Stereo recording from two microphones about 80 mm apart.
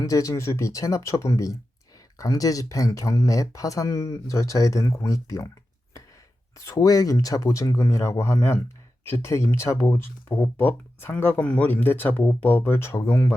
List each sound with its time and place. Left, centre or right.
0.0 s speech: left
6.7 s speech: left